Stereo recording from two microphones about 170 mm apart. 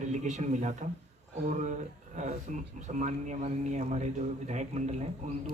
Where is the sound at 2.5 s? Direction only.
45° right (ahead or behind).